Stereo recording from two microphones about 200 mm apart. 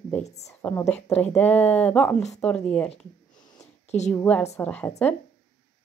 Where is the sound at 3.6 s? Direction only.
35° left (ahead or behind).